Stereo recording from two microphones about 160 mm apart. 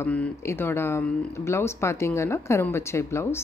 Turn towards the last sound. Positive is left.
turn(degrees=15)  # may be behind; listen again after turning